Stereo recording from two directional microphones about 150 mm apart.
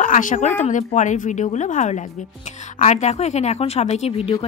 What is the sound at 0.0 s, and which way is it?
A woman's voice, 60° left (ahead or behind).